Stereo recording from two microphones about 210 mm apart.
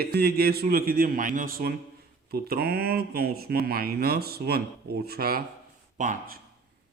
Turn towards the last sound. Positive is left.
turn(degrees=-40)  # may be behind; listen again after turning